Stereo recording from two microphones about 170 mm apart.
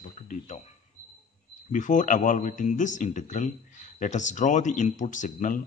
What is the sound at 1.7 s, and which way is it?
A man's voice, 50° left (ahead or behind).